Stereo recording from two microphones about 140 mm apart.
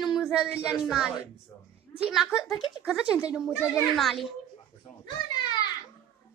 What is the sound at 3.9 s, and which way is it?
Speech, centre (ahead or behind).